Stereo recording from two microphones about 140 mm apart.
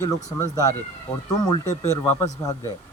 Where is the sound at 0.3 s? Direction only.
25° left (ahead or behind).